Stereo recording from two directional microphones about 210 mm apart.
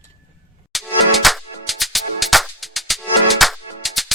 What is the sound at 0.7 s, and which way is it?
Music, centre (ahead or behind).